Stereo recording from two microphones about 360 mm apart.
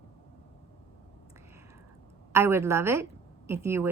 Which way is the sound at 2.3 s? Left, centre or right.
Centre.